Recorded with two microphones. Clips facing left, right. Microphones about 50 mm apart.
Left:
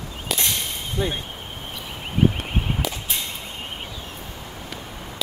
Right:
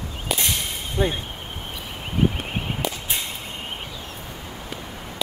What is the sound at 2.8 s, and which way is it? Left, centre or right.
Whip, centre.